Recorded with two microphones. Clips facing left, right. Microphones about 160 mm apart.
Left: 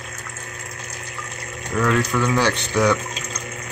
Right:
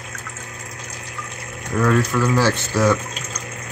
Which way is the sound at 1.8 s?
Centre (ahead or behind).